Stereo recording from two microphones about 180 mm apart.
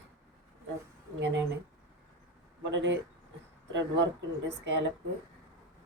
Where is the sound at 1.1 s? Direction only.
80° right.